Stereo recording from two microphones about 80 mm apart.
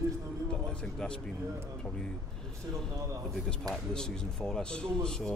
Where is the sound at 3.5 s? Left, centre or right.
Centre.